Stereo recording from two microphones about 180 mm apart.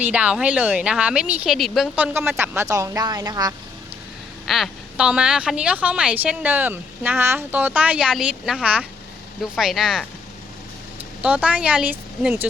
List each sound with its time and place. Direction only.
0.0 s a woman's voice: 5° right (ahead or behind)
2.1 s a woman's voice: 10° right (ahead or behind)
4.4 s a woman's voice: centre (ahead or behind)
11.2 s a woman's voice: 5° right (ahead or behind)